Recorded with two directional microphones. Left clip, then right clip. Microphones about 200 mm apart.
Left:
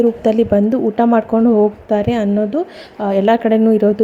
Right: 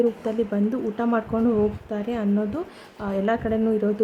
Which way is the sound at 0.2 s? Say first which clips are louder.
Left 12 dB; 35° left (ahead or behind).